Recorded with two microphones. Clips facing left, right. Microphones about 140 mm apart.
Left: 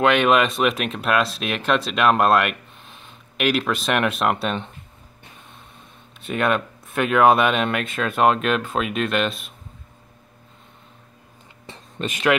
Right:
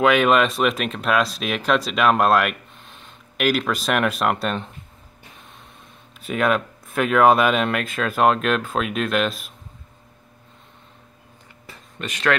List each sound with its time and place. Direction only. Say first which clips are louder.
0.0 s speech: right 1 dB; centre (ahead or behind)
6.1 s speech: right 1 dB; centre (ahead or behind)
11.6 s a sound: left 4 dB; 25° left (ahead or behind)